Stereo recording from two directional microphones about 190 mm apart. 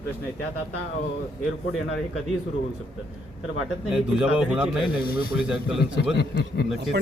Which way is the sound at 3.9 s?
5° right (ahead or behind).